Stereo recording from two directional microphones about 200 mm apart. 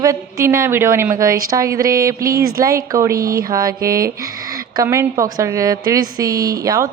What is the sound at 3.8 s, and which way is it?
Speech, 50° right (ahead or behind).